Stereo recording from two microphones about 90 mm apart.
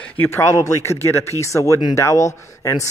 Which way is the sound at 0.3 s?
30° left (ahead or behind).